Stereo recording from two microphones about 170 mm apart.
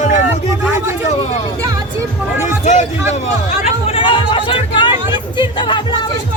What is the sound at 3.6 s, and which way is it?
Speech, 30° left (ahead or behind).